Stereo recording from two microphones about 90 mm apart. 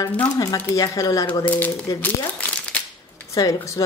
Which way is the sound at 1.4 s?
20° left (ahead or behind).